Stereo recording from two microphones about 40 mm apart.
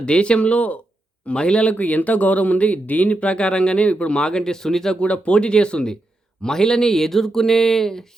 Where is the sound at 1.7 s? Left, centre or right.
Left; by 5.0 s centre.